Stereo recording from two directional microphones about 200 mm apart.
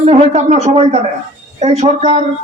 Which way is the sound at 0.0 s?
30° right (ahead or behind).